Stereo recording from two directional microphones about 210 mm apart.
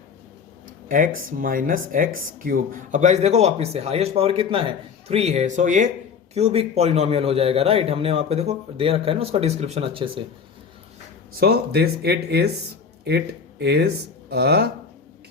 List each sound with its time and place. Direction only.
0.9 s a man's voice: 40° right (ahead or behind); by 10.2 s 25° right (ahead or behind)
11.3 s speech: 50° right (ahead or behind)